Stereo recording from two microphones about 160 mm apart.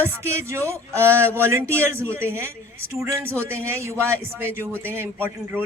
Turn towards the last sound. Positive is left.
turn(degrees=-15)  # may be behind; listen again after turning